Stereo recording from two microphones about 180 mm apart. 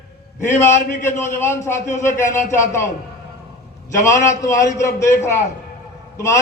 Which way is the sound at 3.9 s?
15° left (ahead or behind).